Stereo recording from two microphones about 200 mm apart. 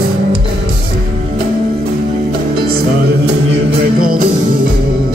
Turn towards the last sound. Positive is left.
turn(degrees=-45)  # may be behind; listen again after turning